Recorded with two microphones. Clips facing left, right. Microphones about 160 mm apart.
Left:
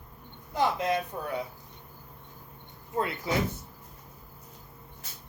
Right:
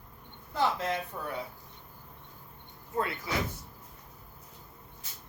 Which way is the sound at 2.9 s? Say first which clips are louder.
Left 2 dB; 25° left (ahead or behind).